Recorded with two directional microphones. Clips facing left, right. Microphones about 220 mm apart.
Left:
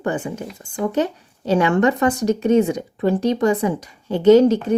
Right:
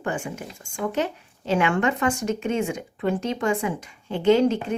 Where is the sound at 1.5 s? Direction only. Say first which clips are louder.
Left 5 dB; 35° left (ahead or behind).